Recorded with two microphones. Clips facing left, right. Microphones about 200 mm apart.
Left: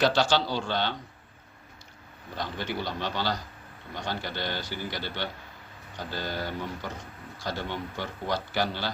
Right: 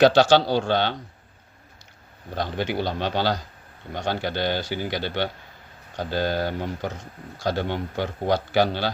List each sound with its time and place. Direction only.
0.0 s a man's voice: 75° right (ahead or behind)
2.4 s a man's voice: 70° right (ahead or behind)